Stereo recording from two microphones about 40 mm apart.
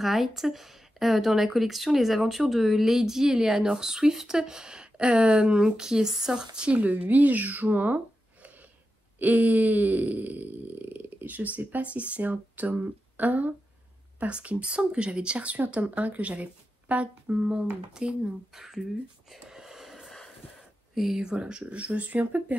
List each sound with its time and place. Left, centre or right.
0.0 s speech: centre; by 8.5 s right
9.2 s a sound: right
12.8 s speech: right; by 18.6 s centre
18.6 s speech: centre
19.4 s a sound: centre
20.9 s speech: centre
21.3 s speech: right